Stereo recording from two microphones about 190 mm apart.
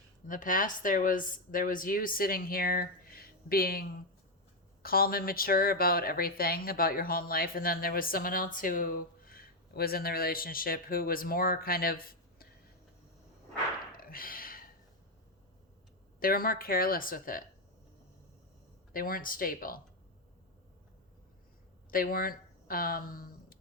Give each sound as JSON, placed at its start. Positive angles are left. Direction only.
{"t": 0.3, "sound": "speech", "side_deg": 45}
{"t": 13.9, "sound": "a sound", "side_deg": 50}
{"t": 16.2, "sound": "speech", "side_deg": 50}
{"t": 18.9, "sound": "speech", "side_deg": 50}
{"t": 21.8, "sound": "speech", "side_deg": 50}